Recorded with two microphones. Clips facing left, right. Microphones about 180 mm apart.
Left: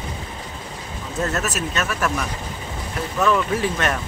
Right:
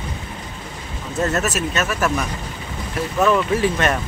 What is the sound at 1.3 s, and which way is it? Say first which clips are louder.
Speech: right 3 dB; centre (ahead or behind).